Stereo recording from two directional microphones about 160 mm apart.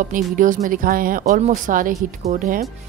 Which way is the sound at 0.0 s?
55° right (ahead or behind).